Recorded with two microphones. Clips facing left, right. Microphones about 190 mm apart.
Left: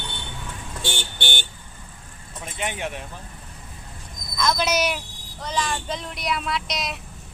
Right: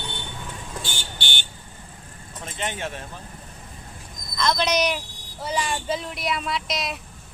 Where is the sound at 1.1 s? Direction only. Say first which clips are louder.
Left 4 dB; 50° left (ahead or behind).